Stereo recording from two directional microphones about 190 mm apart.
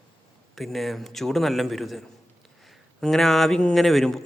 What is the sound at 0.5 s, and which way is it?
Speech, centre (ahead or behind).